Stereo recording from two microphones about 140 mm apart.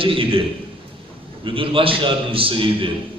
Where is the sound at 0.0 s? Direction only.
40° right (ahead or behind).